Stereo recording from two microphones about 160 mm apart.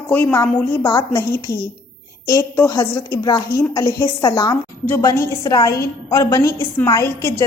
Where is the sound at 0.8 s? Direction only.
25° left (ahead or behind).